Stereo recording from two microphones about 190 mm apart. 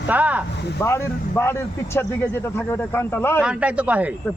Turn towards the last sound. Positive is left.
turn(degrees=-5)  # may be behind; listen again after turning